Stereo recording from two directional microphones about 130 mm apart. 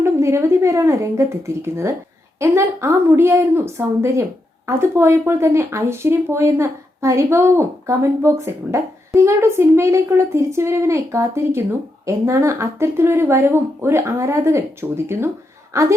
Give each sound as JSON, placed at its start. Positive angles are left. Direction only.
{"t": 0.0, "sound": "a woman's voice", "side_deg": -20}